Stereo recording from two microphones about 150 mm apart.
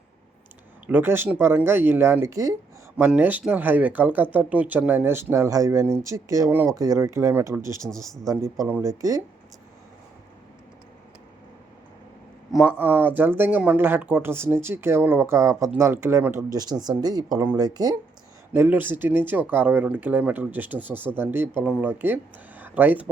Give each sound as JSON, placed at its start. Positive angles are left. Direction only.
{"t": 0.9, "sound": "speech", "side_deg": -15}
{"t": 7.8, "sound": "speech", "side_deg": 5}
{"t": 8.3, "sound": "speech", "side_deg": -20}
{"t": 12.5, "sound": "speech", "side_deg": -5}
{"t": 17.3, "sound": "speech", "side_deg": -15}
{"t": 17.6, "sound": "speech", "side_deg": -25}
{"t": 18.5, "sound": "speech", "side_deg": -15}